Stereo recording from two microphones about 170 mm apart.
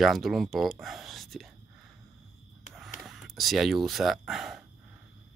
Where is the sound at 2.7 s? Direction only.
Centre (ahead or behind).